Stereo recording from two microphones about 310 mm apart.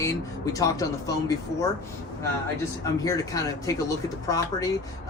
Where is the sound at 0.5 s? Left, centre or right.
Centre.